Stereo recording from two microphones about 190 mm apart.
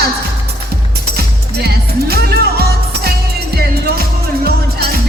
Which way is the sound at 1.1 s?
55° right (ahead or behind).